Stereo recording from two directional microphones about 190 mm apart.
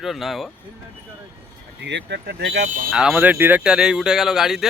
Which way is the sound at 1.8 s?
65° right (ahead or behind).